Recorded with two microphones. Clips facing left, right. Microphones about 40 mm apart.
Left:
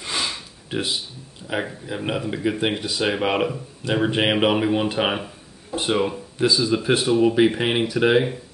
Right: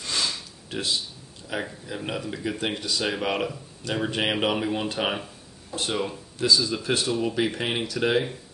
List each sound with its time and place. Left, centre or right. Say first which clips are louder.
0.0 s sniff: left 2 dB; left
1.5 s speech: left 5 dB; left